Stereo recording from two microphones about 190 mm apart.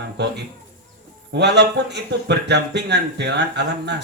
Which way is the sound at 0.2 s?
65° right (ahead or behind).